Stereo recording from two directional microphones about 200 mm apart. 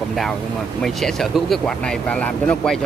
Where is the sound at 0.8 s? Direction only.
Centre (ahead or behind).